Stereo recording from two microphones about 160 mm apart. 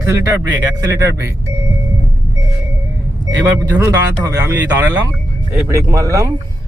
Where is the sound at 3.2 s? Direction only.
20° right (ahead or behind).